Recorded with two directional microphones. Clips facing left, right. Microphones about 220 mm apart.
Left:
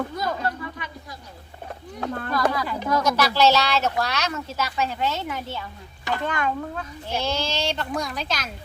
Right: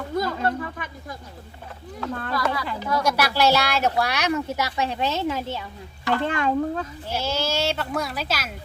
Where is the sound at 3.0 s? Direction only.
10° right (ahead or behind); by 6.9 s 30° right (ahead or behind).